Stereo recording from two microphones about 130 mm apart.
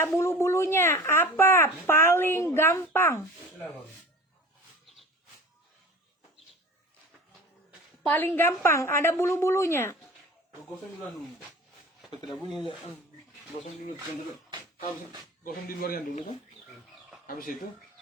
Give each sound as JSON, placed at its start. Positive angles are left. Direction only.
{"t": 0.2, "sound": "a woman's voice", "side_deg": 20}
{"t": 8.0, "sound": "a woman's voice", "side_deg": 15}
{"t": 12.2, "sound": "speech", "side_deg": 0}
{"t": 15.4, "sound": "a man's voice", "side_deg": 90}
{"t": 17.2, "sound": "a man's voice", "side_deg": 90}